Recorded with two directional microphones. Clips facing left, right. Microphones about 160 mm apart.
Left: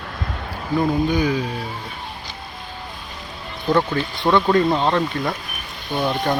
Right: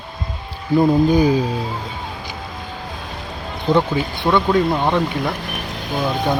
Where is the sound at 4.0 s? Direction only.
10° right (ahead or behind).